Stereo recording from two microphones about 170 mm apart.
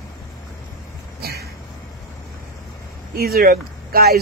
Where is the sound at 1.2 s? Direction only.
65° right (ahead or behind).